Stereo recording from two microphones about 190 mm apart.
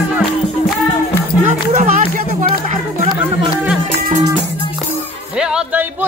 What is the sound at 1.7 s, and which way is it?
Music, 40° right (ahead or behind).